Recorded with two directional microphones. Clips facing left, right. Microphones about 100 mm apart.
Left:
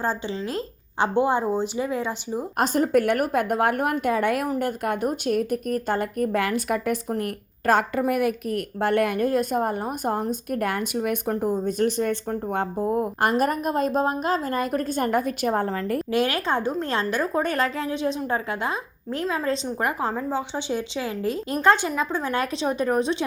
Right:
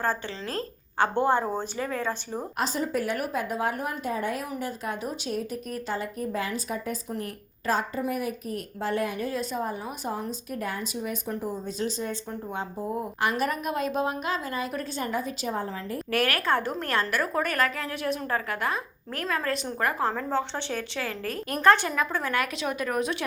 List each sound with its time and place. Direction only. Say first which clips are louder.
0.0 s speech: left 3 dB; 15° left (ahead or behind)
2.6 s a woman's voice: left 8 dB; 55° left (ahead or behind); by 4.4 s 75° left (ahead or behind)
4.6 s a woman's voice: left 7 dB; 60° left (ahead or behind)
16.1 s a woman's voice: left 1 dB; 20° left (ahead or behind)